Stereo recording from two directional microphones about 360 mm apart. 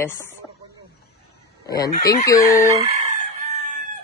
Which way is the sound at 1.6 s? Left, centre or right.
Centre.